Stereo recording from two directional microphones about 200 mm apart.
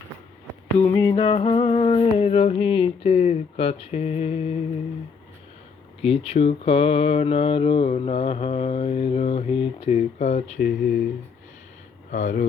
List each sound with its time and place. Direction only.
0.9 s music: 15° left (ahead or behind)
1.1 s speech: 30° left (ahead or behind)
6.0 s speech: 30° left (ahead or behind)
10.6 s speech: 45° left (ahead or behind)
12.1 s speech: 35° left (ahead or behind)